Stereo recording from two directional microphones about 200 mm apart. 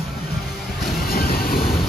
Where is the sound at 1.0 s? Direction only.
50° left (ahead or behind).